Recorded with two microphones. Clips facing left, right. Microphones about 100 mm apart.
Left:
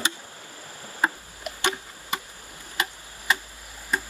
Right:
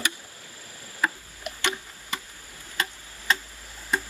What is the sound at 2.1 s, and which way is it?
Chop, 20° left (ahead or behind).